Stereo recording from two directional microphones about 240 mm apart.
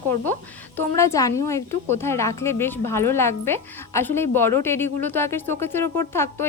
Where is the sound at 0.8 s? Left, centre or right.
Centre.